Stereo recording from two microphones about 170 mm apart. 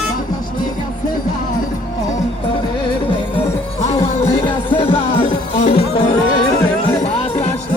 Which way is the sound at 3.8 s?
35° left (ahead or behind).